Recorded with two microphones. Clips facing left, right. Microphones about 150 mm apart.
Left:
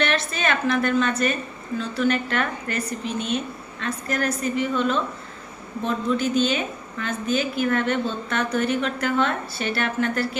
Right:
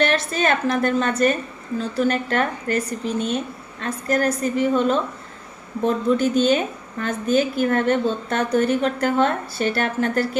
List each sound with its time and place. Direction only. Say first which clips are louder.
0.0 s a woman's voice: right 4 dB; 40° right (ahead or behind)